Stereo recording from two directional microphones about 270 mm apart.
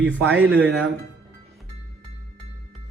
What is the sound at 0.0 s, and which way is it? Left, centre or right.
Speech, centre.